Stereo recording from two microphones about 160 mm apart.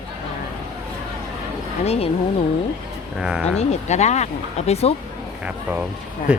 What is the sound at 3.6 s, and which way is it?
Speech, 45° left (ahead or behind).